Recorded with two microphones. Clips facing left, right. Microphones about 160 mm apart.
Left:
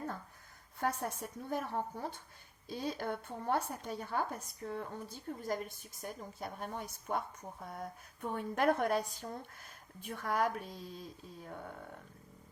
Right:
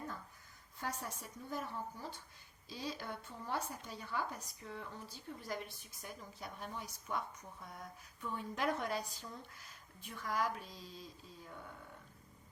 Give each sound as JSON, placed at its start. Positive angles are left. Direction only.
{"t": 0.8, "sound": "speech", "side_deg": 55}